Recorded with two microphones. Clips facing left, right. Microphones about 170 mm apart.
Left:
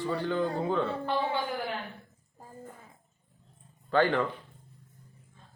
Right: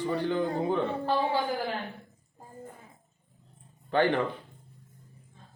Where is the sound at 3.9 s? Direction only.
20° right (ahead or behind).